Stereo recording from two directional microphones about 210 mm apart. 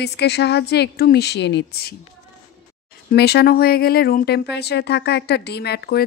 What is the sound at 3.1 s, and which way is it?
Speech, 50° left (ahead or behind).